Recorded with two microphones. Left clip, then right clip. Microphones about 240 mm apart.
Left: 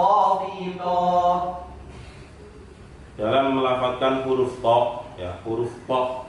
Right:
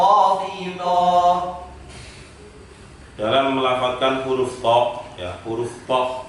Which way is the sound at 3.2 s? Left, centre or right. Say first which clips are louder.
Right 2 dB; centre.